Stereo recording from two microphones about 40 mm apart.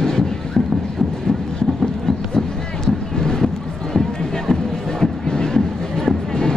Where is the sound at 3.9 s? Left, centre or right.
Centre.